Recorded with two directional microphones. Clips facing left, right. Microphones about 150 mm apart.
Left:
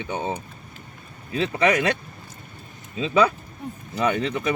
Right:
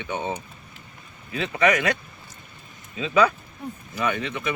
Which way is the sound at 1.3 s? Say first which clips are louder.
Left 1 dB; 35° left (ahead or behind).